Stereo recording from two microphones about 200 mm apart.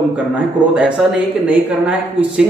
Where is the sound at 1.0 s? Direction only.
5° right (ahead or behind).